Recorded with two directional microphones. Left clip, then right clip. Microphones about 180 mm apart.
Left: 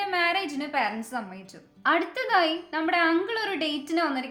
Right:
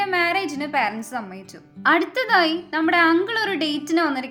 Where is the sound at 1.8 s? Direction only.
40° right (ahead or behind).